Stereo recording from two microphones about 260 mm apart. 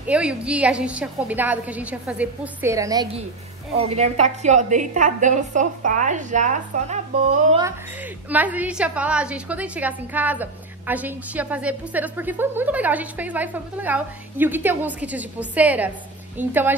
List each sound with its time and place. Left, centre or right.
0.1 s a woman's voice: centre; by 7.0 s right
8.3 s a woman's voice: centre